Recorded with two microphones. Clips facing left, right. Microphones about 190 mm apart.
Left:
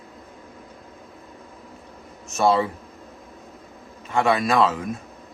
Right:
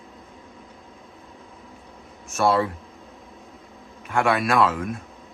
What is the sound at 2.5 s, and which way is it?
Speech, centre (ahead or behind).